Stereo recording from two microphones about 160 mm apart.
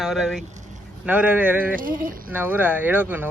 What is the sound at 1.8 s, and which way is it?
Speech, 60° right (ahead or behind).